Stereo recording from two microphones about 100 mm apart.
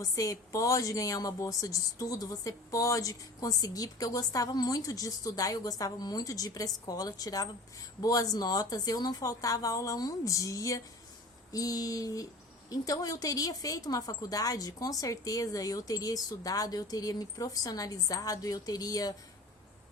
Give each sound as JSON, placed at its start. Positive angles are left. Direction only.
{"t": 0.0, "sound": "a woman's voice", "side_deg": 35}